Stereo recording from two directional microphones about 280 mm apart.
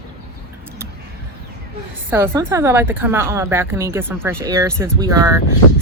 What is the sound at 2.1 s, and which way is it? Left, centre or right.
Speech, centre.